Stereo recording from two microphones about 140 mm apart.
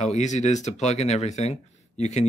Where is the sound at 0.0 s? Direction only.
55° left (ahead or behind).